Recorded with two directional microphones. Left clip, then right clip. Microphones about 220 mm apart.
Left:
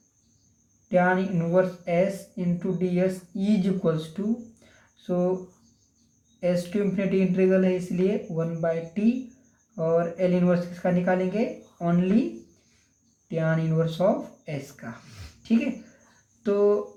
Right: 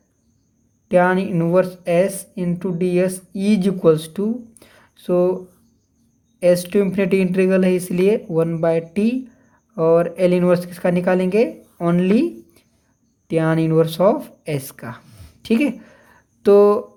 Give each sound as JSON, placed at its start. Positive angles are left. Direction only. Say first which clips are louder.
{"t": 0.9, "sound": "speech", "louder": "right 7 dB", "side_deg": -50}
{"t": 4.7, "sound": "a sound", "louder": "right 10 dB", "side_deg": -50}
{"t": 6.4, "sound": "speech", "louder": "right 10 dB", "side_deg": -50}
{"t": 13.2, "sound": "a woman's voice", "louder": "right 9 dB", "side_deg": -50}